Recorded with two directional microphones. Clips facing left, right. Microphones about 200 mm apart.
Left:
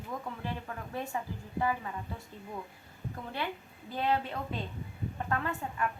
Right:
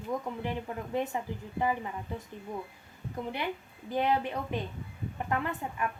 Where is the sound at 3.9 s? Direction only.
15° right (ahead or behind).